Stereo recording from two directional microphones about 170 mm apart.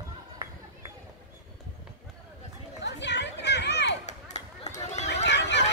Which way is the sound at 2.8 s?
90° left.